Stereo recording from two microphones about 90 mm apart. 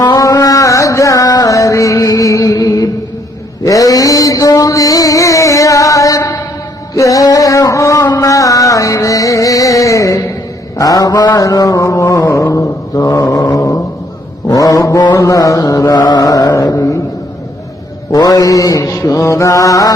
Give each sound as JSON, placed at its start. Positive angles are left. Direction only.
{"t": 0.0, "sound": "music", "side_deg": 45}
{"t": 3.6, "sound": "a sound", "side_deg": 40}
{"t": 6.9, "sound": "music", "side_deg": 40}
{"t": 10.8, "sound": "mantra", "side_deg": 45}
{"t": 13.5, "sound": "a sound", "side_deg": 40}
{"t": 14.5, "sound": "mantra", "side_deg": 40}
{"t": 18.1, "sound": "mantra", "side_deg": 45}